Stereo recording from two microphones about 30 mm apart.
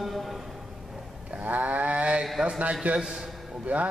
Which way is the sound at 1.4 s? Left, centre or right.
Right.